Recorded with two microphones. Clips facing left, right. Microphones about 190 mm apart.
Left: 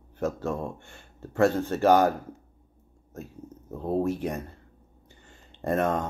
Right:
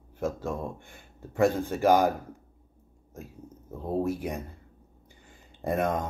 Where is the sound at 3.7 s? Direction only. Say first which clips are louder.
Left 2 dB; 10° right (ahead or behind).